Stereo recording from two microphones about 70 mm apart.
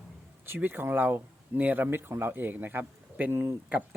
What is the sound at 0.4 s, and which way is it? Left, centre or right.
Speech, right.